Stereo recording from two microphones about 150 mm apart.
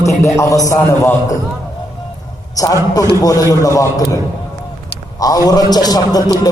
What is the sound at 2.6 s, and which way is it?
A man's voice, 25° left (ahead or behind).